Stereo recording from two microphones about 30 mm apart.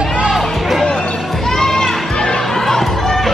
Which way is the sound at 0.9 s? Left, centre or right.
Centre.